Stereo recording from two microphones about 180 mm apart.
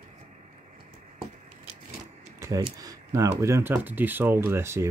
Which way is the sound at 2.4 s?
15° right (ahead or behind).